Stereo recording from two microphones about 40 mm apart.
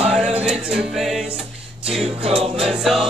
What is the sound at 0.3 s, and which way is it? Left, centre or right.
Music, right.